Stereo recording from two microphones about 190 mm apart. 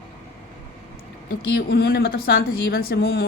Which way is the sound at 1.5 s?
55° left (ahead or behind).